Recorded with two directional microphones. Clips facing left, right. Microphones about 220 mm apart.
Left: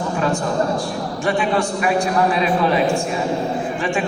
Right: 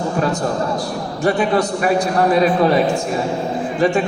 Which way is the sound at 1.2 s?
40° right (ahead or behind).